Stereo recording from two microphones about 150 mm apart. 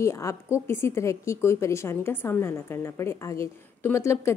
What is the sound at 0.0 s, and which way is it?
A woman's voice, 20° left (ahead or behind).